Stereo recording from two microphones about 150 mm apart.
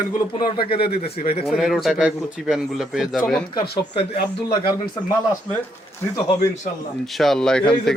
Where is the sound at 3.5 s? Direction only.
35° left (ahead or behind).